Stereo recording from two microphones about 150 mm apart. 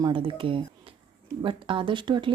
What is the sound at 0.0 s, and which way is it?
Speech, 35° right (ahead or behind).